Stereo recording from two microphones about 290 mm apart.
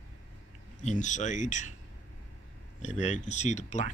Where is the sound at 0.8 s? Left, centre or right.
Left.